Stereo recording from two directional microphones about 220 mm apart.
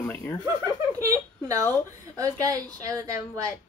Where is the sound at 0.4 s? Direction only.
15° right (ahead or behind).